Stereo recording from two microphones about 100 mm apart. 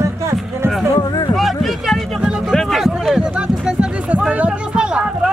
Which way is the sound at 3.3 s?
10° right (ahead or behind).